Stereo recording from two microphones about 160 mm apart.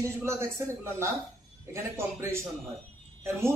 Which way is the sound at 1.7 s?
15° right (ahead or behind).